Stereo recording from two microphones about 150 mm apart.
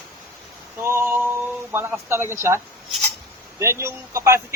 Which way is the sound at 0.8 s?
15° right (ahead or behind).